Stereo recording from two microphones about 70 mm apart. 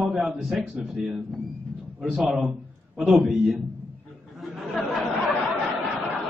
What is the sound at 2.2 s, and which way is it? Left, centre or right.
A man's voice, centre.